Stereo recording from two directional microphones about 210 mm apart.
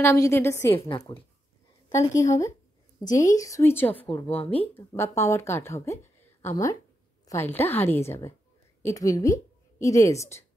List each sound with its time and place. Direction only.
0.0 s a woman's voice: 10° left (ahead or behind)
3.1 s a woman's voice: 35° left (ahead or behind)
3.3 s a woman's voice: 15° left (ahead or behind)
4.3 s a woman's voice: 25° left (ahead or behind)
4.7 s a woman's voice: 10° left (ahead or behind)